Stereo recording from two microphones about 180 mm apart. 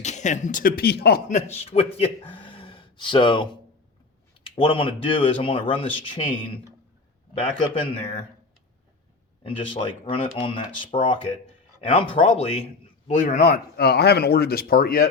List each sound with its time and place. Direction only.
0.0 s speech: 40° left (ahead or behind); by 1.2 s 60° left (ahead or behind)
1.3 s speech: 40° left (ahead or behind)
7.6 s speech: 25° left (ahead or behind)
9.4 s speech: 30° left (ahead or behind); by 15.0 s 55° left (ahead or behind)